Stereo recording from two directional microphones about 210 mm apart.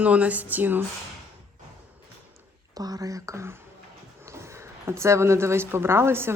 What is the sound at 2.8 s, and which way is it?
A woman's voice, 15° right (ahead or behind).